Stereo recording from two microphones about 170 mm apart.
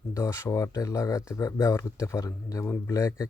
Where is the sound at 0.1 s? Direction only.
15° left (ahead or behind).